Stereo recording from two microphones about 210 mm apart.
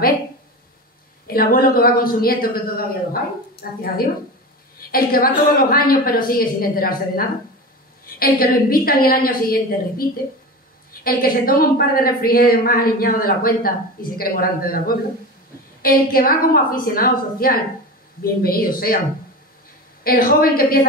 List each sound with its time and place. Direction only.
1.2 s a woman's voice: 45° left (ahead or behind)
3.8 s a woman's voice: 45° left (ahead or behind)
20.0 s a woman's voice: 45° left (ahead or behind)